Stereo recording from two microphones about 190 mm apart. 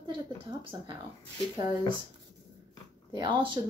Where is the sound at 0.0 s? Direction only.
20° right (ahead or behind).